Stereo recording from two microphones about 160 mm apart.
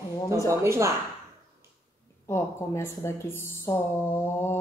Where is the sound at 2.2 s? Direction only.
15° left (ahead or behind).